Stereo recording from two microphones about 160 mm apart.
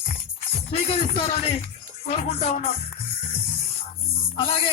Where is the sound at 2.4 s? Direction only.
45° left (ahead or behind).